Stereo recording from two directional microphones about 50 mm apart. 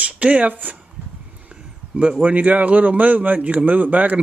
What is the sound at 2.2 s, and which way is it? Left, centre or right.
A man's voice, right.